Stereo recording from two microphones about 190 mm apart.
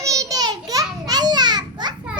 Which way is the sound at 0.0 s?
15° right (ahead or behind).